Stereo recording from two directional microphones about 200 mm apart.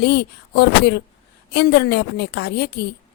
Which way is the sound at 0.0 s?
55° left (ahead or behind).